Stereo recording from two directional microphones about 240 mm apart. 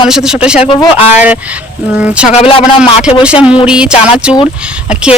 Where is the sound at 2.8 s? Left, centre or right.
Centre.